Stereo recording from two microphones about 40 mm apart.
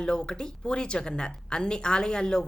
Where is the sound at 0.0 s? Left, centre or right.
Left.